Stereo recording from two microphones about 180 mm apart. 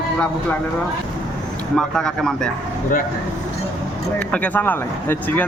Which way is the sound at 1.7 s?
5° left (ahead or behind).